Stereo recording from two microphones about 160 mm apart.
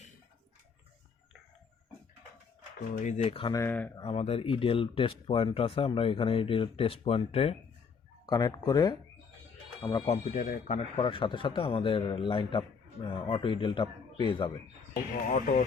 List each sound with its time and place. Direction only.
3.0 s a man's voice: 45° left (ahead or behind)
3.5 s speech: 15° left (ahead or behind)
4.0 s a man's voice: 40° left (ahead or behind)
8.3 s speech: 25° left (ahead or behind)
10.1 s speech: 50° left (ahead or behind)
10.8 s a man's voice: 35° left (ahead or behind)
15.3 s speech: 55° left (ahead or behind)